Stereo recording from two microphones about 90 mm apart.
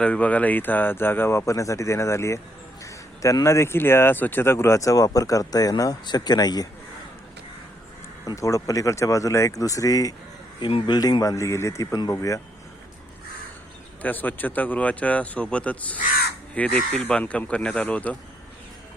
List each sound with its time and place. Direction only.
0.0 s speech: 15° left (ahead or behind); by 6.7 s 50° left (ahead or behind)
8.4 s speech: 35° left (ahead or behind)
10.6 s speech: 90° left
10.8 s speech: 55° left (ahead or behind); by 12.4 s 40° left (ahead or behind)
14.0 s speech: 20° left (ahead or behind)